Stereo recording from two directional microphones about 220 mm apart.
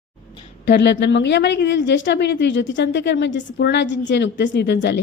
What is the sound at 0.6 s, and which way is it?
A woman's voice, 50° left (ahead or behind).